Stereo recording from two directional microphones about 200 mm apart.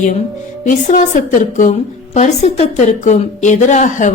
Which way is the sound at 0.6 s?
40° left (ahead or behind).